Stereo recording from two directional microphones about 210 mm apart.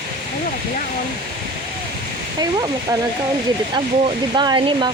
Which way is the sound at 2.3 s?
20° right (ahead or behind).